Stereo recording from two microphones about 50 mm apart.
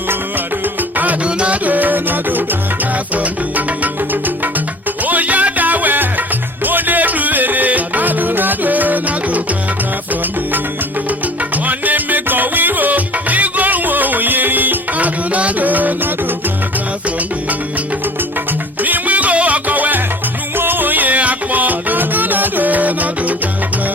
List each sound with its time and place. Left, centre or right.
0.1 s music: right
1.2 s music: right
5.0 s music: right
11.5 s music: right
18.8 s music: right